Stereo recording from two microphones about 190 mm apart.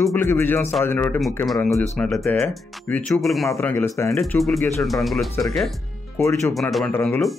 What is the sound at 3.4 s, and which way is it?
Speech, 15° left (ahead or behind).